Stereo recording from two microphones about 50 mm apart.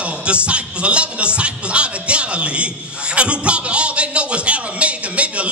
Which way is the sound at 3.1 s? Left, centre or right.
Right.